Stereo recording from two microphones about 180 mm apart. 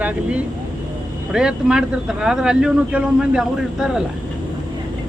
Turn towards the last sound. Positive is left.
turn(degrees=-5)  # may be behind; listen again after turning